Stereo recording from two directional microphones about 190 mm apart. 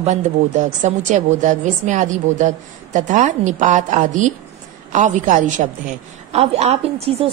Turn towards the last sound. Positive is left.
turn(degrees=-30)  # may be behind; listen again after turning